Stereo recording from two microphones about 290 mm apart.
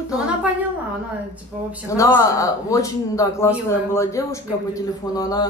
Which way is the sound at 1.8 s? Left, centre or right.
Centre.